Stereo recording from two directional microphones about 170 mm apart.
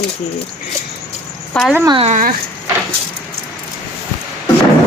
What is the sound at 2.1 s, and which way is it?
Speech, 50° right (ahead or behind).